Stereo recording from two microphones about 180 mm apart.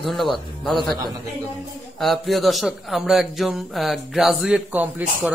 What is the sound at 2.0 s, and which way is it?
A man's voice, centre (ahead or behind).